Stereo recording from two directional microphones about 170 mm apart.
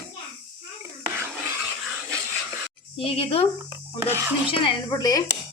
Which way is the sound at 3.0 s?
35° left (ahead or behind).